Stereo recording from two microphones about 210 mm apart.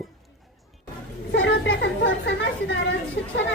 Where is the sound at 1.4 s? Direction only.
55° left (ahead or behind).